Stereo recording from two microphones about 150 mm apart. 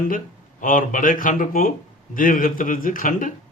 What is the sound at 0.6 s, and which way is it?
Speech, 60° left (ahead or behind).